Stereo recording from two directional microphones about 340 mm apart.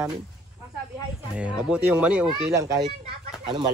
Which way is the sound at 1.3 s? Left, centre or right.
Centre.